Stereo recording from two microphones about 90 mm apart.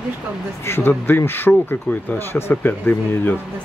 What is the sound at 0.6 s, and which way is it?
Speech, 25° left (ahead or behind).